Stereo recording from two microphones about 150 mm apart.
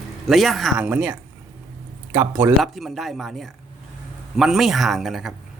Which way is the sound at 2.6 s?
Centre (ahead or behind).